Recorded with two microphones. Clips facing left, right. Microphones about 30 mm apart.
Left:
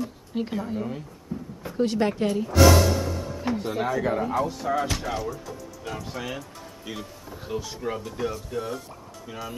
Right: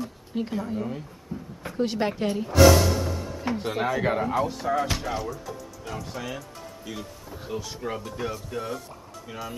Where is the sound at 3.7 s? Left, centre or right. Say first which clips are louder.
Right 1 dB; centre.